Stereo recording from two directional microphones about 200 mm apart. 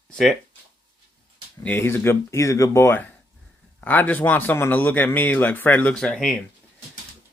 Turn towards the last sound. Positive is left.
turn(degrees=5)  # may be behind; listen again after turning